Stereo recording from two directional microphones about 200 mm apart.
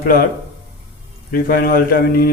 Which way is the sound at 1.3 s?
45° left (ahead or behind).